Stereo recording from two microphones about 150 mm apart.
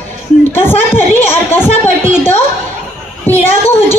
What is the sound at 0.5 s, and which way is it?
Speech, 15° left (ahead or behind).